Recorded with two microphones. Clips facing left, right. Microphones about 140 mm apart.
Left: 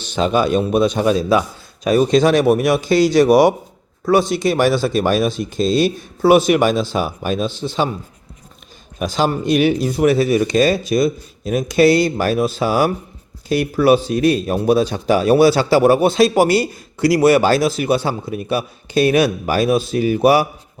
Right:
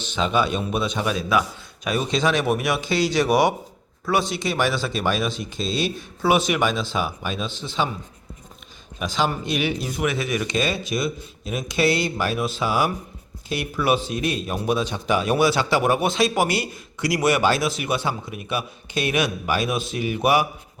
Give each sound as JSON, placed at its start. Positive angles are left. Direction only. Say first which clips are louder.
{"t": 0.0, "sound": "a man's voice", "louder": "left 5 dB", "side_deg": 40}
{"t": 9.0, "sound": "a man's voice", "louder": "left 6 dB", "side_deg": 40}